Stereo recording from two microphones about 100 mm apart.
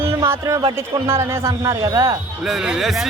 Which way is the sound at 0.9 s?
25° right (ahead or behind).